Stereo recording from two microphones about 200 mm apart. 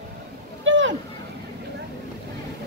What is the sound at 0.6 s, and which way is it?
Boat, 70° right (ahead or behind).